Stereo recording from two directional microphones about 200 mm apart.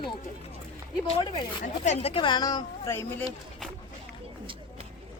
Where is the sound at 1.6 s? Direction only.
30° left (ahead or behind); by 3.2 s 10° left (ahead or behind).